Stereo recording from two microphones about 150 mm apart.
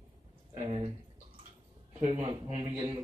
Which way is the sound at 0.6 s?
40° right (ahead or behind).